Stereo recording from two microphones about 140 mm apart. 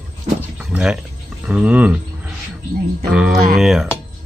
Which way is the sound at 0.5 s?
5° right (ahead or behind).